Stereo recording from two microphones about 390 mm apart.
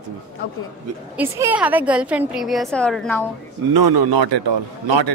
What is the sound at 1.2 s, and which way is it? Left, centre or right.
A woman's voice, centre.